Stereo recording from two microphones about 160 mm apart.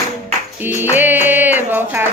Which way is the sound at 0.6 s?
10° right (ahead or behind).